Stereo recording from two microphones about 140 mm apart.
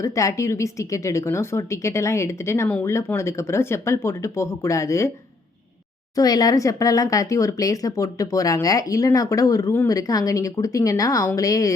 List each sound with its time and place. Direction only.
0.0 s speech: 20° left (ahead or behind)
6.1 s speech: 25° left (ahead or behind)